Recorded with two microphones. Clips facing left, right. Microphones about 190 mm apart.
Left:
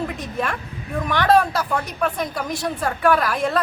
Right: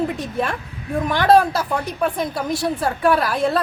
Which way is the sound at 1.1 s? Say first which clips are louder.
Right 2 dB; 30° right (ahead or behind).